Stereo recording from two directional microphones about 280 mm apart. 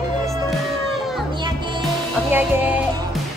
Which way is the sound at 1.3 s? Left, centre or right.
Centre.